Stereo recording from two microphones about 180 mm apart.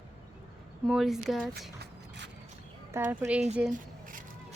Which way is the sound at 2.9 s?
15° right (ahead or behind).